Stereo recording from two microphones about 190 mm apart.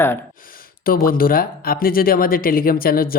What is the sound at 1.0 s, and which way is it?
Speech, 50° left (ahead or behind).